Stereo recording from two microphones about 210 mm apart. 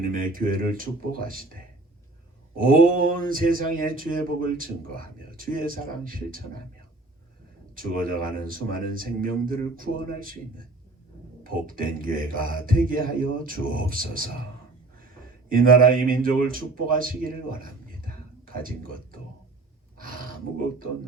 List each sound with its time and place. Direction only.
0.1 s speech: 40° right (ahead or behind)
2.6 s speech: 40° right (ahead or behind)
7.8 s speech: 40° right (ahead or behind)
11.4 s speech: 40° right (ahead or behind)
15.4 s speech: 40° right (ahead or behind)